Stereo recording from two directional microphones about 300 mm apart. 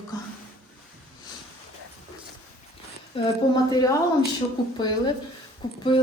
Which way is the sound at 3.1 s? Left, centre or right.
Centre.